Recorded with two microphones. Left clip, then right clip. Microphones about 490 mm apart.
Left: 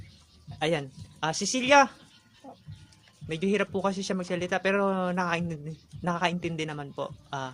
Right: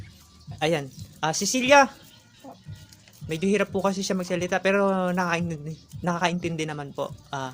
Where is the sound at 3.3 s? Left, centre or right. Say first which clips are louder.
Right 3 dB; left.